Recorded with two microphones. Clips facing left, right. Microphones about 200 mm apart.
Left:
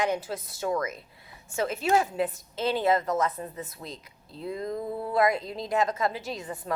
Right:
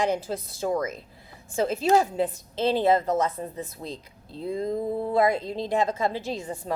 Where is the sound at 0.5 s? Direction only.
30° right (ahead or behind).